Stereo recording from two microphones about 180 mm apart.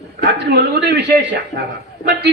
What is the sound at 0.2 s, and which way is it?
Speech, 70° right (ahead or behind).